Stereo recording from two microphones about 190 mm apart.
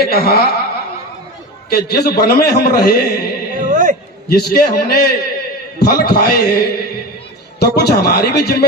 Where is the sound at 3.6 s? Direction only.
45° right (ahead or behind).